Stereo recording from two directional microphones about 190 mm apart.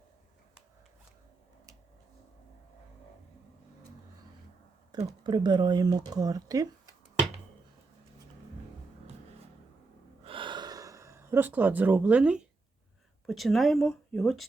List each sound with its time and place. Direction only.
5.0 s speech: 20° right (ahead or behind)
10.2 s gasp: 25° right (ahead or behind); by 12.5 s 5° right (ahead or behind)
13.2 s speech: centre (ahead or behind)